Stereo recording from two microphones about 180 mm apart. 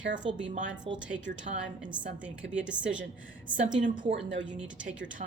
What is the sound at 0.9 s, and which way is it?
Speech, 30° right (ahead or behind).